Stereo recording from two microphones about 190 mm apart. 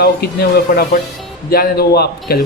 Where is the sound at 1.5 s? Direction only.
55° left (ahead or behind).